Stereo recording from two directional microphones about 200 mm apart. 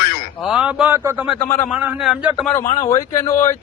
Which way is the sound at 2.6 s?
35° left (ahead or behind).